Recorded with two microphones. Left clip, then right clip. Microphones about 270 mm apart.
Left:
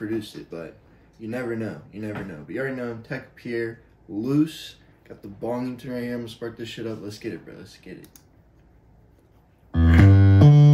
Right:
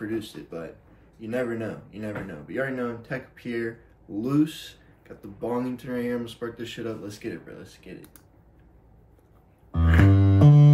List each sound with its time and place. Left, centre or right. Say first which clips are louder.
0.0 s speech: left 2 dB; centre
10.0 s music: right 1 dB; left